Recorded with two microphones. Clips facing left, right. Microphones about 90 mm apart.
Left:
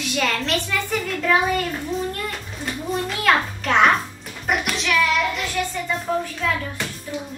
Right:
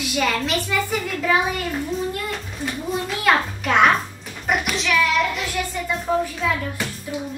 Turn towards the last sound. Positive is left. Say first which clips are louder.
# right 2 dB
turn(degrees=-5)  # may be behind; listen again after turning